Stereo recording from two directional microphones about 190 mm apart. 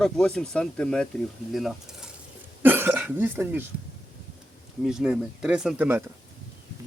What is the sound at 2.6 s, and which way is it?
Speech, 10° right (ahead or behind).